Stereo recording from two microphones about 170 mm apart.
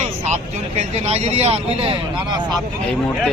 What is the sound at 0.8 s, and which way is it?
A man's voice, 40° right (ahead or behind).